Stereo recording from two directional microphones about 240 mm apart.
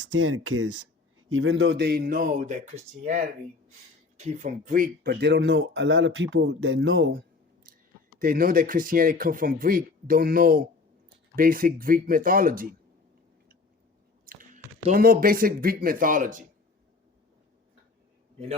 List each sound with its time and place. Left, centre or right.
0.1 s speech: right
1.3 s speech: right
8.2 s speech: right
14.3 s speech: right